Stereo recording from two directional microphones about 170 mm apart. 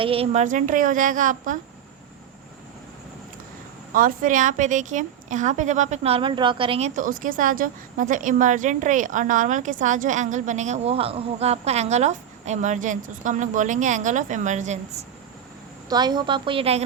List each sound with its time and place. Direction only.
0.0 s speech: 35° right (ahead or behind)
0.4 s a woman's voice: 50° right (ahead or behind)
3.9 s a woman's voice: 55° right (ahead or behind)
15.9 s a woman's voice: 25° right (ahead or behind)